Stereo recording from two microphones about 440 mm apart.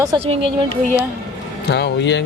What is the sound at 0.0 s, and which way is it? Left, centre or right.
Speech, centre.